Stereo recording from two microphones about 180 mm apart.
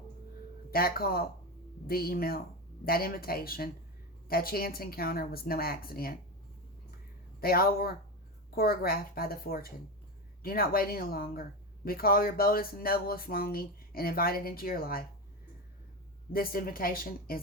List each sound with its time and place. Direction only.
0.7 s speech: 55° left (ahead or behind)
7.4 s speech: 55° left (ahead or behind)
16.3 s a woman's voice: 55° left (ahead or behind)